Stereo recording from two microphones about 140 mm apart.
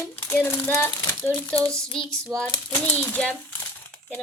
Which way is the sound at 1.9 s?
5° left (ahead or behind).